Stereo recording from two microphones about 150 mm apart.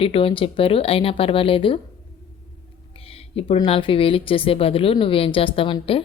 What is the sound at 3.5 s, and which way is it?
A woman's voice, 35° left (ahead or behind).